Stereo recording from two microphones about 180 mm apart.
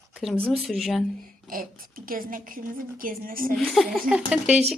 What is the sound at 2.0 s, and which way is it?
A woman's voice, 50° right (ahead or behind).